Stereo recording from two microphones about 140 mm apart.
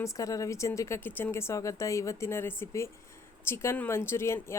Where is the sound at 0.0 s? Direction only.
25° left (ahead or behind).